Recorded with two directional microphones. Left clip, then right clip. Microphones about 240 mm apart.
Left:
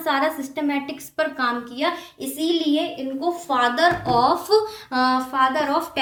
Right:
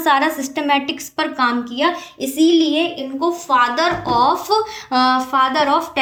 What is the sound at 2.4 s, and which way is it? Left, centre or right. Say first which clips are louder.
Speech: right 7 dB; right.